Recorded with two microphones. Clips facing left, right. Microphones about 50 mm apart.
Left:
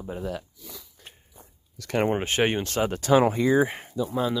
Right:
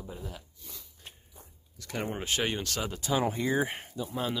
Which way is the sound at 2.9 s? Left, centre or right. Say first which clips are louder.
Left 11 dB; left.